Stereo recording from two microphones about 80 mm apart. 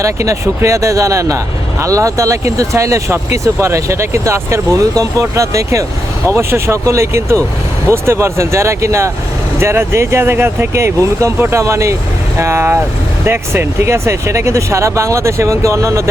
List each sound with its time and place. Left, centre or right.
0.0 s speech: right